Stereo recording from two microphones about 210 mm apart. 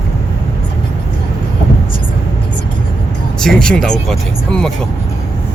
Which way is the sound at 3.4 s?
Centre (ahead or behind).